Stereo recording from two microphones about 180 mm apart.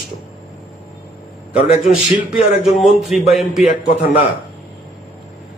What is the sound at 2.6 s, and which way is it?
A man's voice, centre (ahead or behind).